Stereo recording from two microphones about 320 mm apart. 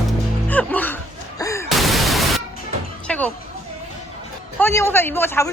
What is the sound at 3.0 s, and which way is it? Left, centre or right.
Music, centre.